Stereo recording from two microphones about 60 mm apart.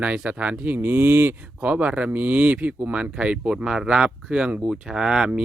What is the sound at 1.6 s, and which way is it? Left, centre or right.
Speech, right.